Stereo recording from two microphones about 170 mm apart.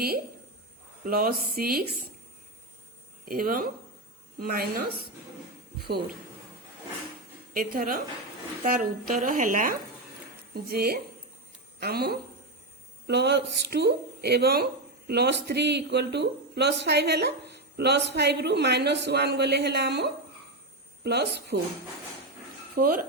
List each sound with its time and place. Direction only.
1.0 s a woman's voice: 60° right (ahead or behind)
3.2 s a woman's voice: 55° right (ahead or behind)
7.5 s a woman's voice: 60° right (ahead or behind)
10.5 s a woman's voice: 65° right (ahead or behind)
13.1 s a woman's voice: 85° right
22.7 s speech: 60° right (ahead or behind)